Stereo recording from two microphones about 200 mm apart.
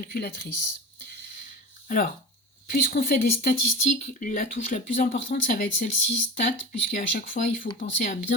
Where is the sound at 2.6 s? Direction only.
50° left (ahead or behind).